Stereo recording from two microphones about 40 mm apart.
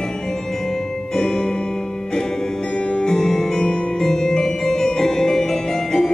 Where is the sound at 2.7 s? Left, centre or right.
Left.